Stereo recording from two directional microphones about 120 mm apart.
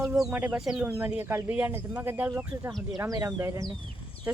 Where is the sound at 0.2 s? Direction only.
10° right (ahead or behind).